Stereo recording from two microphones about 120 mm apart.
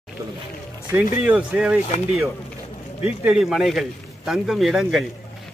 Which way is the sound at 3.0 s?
5° right (ahead or behind).